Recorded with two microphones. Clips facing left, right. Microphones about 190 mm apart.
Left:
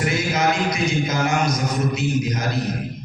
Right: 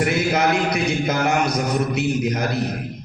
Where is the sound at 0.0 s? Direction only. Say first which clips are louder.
Right 2 dB; 60° right (ahead or behind).